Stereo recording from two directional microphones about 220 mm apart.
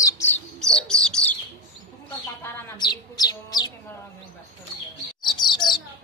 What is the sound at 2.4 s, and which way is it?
Chirp, 20° left (ahead or behind).